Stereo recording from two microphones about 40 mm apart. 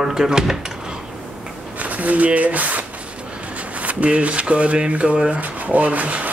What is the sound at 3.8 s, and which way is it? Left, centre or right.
Speech, right.